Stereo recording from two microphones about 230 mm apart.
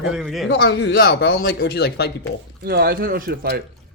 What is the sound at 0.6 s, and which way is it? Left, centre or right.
Speech, left.